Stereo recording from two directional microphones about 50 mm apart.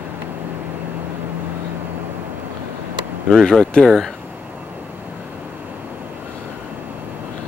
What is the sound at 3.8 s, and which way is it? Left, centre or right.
Speech, centre.